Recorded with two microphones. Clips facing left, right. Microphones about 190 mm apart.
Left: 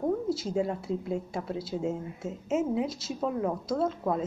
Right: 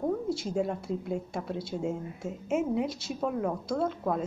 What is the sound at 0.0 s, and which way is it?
Speech, centre (ahead or behind).